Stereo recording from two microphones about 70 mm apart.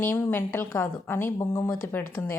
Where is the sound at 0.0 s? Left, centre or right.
Left.